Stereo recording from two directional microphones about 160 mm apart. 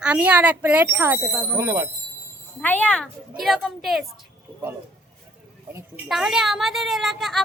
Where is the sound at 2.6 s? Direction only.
10° left (ahead or behind).